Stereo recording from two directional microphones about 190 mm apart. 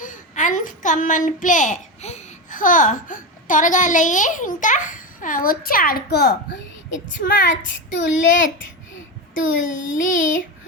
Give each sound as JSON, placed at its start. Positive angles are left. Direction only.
{"t": 0.0, "sound": "a child's voice", "side_deg": 40}
{"t": 7.2, "sound": "child singing", "side_deg": 45}
{"t": 9.7, "sound": "a sound", "side_deg": 90}
{"t": 10.0, "sound": "child singing", "side_deg": 45}